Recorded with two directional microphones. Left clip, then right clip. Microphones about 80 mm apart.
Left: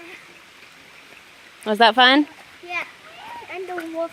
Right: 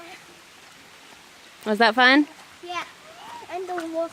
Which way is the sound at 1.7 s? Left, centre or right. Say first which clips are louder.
Left 3 dB; centre.